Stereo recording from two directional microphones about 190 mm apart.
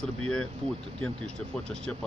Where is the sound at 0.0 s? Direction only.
5° left (ahead or behind).